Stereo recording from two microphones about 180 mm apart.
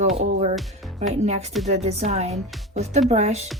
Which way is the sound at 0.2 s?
35° right (ahead or behind).